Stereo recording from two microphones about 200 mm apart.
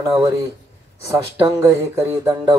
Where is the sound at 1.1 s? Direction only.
15° right (ahead or behind).